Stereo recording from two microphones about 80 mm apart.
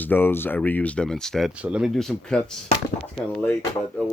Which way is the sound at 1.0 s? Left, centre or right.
Centre.